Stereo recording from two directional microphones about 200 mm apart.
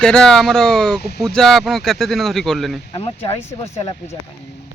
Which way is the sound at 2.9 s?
30° left (ahead or behind).